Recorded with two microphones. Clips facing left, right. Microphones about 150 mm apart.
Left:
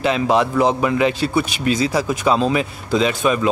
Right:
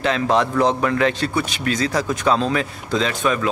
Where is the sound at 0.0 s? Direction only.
10° left (ahead or behind).